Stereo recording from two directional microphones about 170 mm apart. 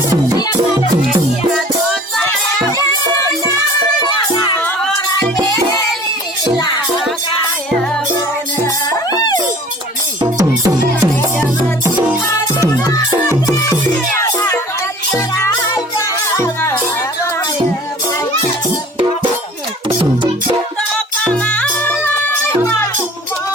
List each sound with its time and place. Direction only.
1.5 s music: centre (ahead or behind)
9.1 s music: 25° left (ahead or behind)
10.2 s music: 20° right (ahead or behind)
12.8 s music: 20° left (ahead or behind)
21.4 s music: 10° left (ahead or behind)